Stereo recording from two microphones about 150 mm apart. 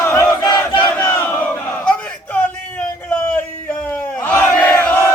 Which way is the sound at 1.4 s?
10° left (ahead or behind).